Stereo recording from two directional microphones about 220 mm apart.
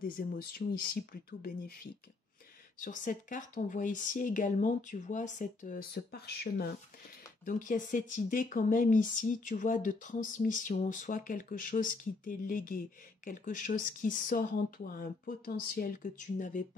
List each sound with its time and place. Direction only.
0.0 s speech: 40° left (ahead or behind)